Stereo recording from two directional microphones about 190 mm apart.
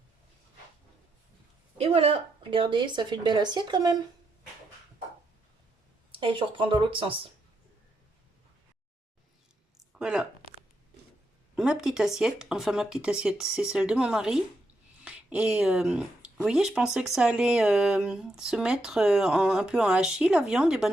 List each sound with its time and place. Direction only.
1.8 s a woman's voice: 30° right (ahead or behind)
6.1 s a woman's voice: 25° right (ahead or behind)
9.9 s speech: 5° right (ahead or behind)
11.5 s speech: 5° right (ahead or behind)